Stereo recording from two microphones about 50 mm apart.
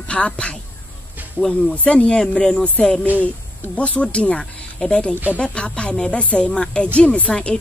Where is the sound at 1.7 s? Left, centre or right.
Left.